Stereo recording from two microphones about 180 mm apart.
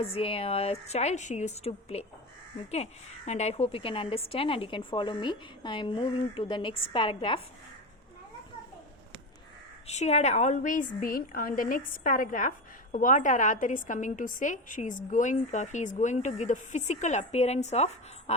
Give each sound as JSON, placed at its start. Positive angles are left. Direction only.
{"t": 0.0, "sound": "a woman's voice", "side_deg": 30}
{"t": 9.8, "sound": "a woman's voice", "side_deg": 40}